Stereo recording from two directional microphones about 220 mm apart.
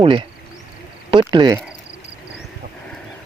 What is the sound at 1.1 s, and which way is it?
Speech, 20° right (ahead or behind).